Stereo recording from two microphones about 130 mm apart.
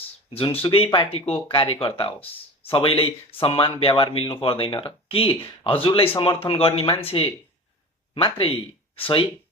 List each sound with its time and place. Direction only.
0.3 s speech: 45° left (ahead or behind)